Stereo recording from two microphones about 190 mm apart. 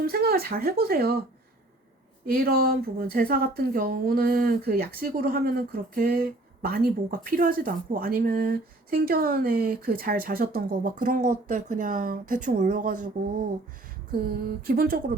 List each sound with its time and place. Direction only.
0.0 s speech: 55° right (ahead or behind)
2.2 s speech: 50° right (ahead or behind)
14.1 s speech: 50° right (ahead or behind)